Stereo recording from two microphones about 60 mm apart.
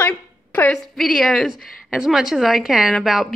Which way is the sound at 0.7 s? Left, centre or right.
Centre.